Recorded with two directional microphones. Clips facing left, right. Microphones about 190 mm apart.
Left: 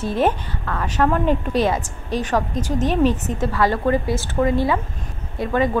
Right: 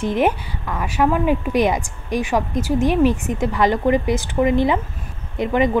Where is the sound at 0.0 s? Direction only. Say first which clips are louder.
Right 1 dB; 15° right (ahead or behind).